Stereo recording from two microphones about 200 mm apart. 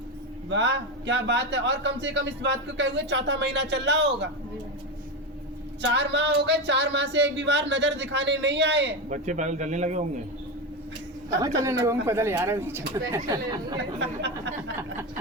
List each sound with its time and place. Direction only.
0.5 s speech: 65° right (ahead or behind)
5.8 s speech: 60° right (ahead or behind)
9.0 s speech: 40° right (ahead or behind)
11.3 s speech: 15° right (ahead or behind)
14.0 s speech: 60° right (ahead or behind)